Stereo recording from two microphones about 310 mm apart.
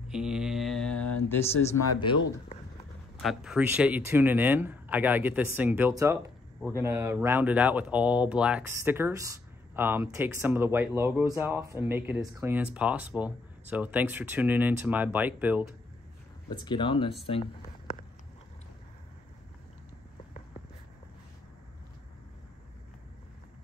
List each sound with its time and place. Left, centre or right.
0.1 s speech: centre
3.2 s speech: centre
16.4 s speech: centre
17.3 s a sound: centre